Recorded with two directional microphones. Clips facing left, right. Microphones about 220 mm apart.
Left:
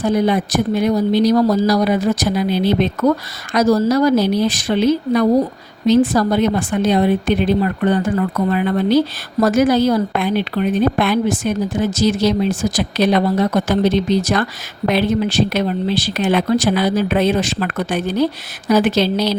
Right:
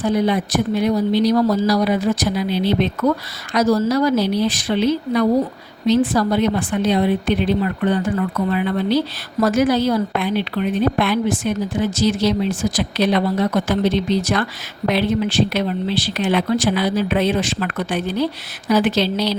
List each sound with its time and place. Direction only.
0.0 s a woman's voice: 45° left (ahead or behind)